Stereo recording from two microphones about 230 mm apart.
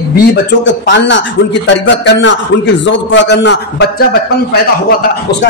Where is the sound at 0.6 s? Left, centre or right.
Left.